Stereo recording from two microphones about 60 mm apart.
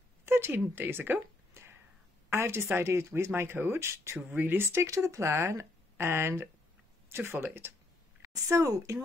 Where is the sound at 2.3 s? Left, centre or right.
Right.